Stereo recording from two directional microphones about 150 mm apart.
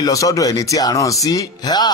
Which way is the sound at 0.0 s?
20° left (ahead or behind).